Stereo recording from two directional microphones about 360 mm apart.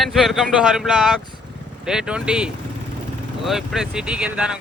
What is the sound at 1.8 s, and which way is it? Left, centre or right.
Speech, centre.